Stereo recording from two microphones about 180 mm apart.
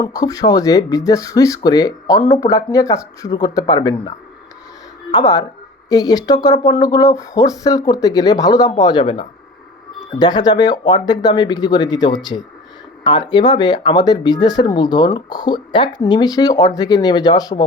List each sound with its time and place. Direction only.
0.0 s speech: 20° left (ahead or behind)
5.1 s speech: 20° left (ahead or behind)